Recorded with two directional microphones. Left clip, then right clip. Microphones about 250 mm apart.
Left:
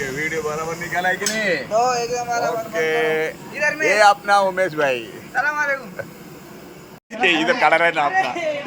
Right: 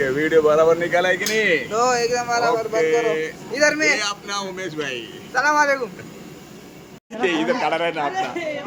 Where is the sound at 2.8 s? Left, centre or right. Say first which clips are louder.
Left 3 dB; centre.